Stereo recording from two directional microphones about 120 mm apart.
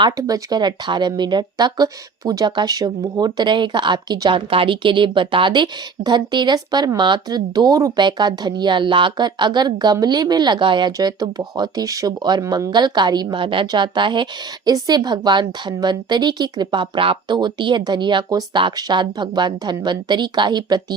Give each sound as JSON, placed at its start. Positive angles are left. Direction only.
{"t": 0.2, "sound": "speech", "side_deg": -30}